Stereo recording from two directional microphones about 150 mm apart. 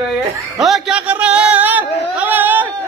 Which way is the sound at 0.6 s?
Centre (ahead or behind).